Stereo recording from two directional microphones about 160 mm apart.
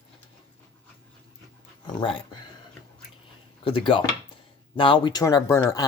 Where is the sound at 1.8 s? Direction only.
30° left (ahead or behind).